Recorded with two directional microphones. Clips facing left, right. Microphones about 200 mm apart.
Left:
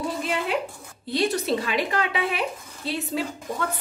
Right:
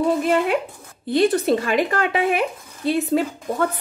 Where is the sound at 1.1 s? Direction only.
50° right (ahead or behind).